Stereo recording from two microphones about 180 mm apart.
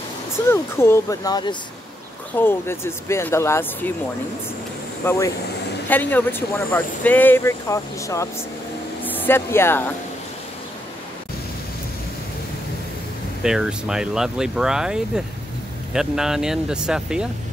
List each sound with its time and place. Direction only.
0.5 s speech: 15° left (ahead or behind)
2.3 s speech: 10° left (ahead or behind)
5.0 s speech: 15° left (ahead or behind)
13.4 s speech: 5° right (ahead or behind)